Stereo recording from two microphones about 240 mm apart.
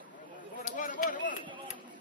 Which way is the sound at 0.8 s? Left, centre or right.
Left.